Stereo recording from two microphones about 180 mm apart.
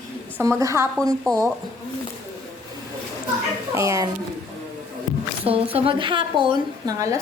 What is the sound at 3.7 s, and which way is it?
Speech, 15° right (ahead or behind).